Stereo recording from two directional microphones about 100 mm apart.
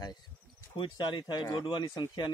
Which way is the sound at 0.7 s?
50° left (ahead or behind).